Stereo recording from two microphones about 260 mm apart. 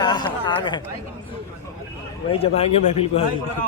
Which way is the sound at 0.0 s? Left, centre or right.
Centre.